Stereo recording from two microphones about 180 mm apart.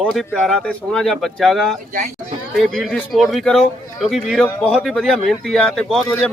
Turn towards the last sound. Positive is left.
turn(degrees=5)  # may be behind; listen again after turning